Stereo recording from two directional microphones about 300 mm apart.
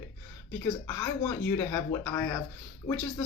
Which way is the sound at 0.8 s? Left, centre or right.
Centre.